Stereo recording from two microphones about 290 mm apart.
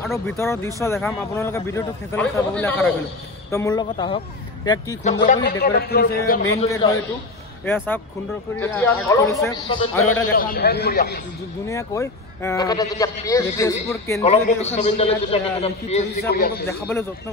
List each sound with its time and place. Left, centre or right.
0.0 s speech: centre
5.2 s a man's voice: left
6.5 s speech: centre
10.3 s a man's voice: left
11.6 s speech: centre
14.3 s a man's voice: left
16.3 s a man's voice: left
16.6 s speech: centre